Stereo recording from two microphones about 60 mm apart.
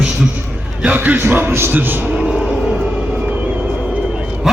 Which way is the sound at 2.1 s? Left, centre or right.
Centre.